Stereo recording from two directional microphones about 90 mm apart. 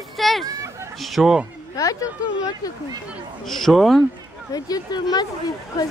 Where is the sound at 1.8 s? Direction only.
40° left (ahead or behind).